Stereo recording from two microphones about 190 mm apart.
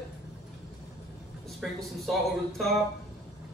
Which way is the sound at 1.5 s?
Centre (ahead or behind).